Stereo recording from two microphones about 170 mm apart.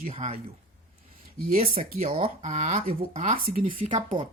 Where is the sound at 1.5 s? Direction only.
35° right (ahead or behind).